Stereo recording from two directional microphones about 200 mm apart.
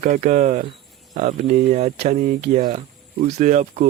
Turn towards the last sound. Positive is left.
turn(degrees=-40)  # may be behind; listen again after turning